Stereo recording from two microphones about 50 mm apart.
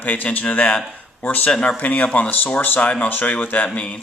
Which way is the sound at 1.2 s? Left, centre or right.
Left.